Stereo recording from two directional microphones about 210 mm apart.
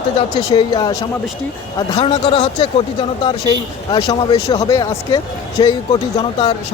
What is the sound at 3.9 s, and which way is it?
Speech, 25° left (ahead or behind).